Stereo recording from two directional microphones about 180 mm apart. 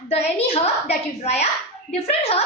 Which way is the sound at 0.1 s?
35° left (ahead or behind).